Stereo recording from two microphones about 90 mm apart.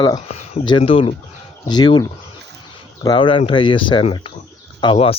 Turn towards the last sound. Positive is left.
turn(degrees=65)  # may be behind; listen again after turning